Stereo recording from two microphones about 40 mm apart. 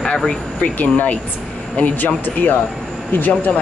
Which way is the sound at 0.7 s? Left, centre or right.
Left.